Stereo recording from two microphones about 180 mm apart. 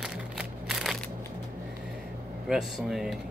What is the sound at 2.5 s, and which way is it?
Speech, centre (ahead or behind).